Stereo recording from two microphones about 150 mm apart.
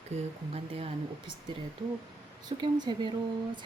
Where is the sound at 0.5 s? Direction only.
40° right (ahead or behind).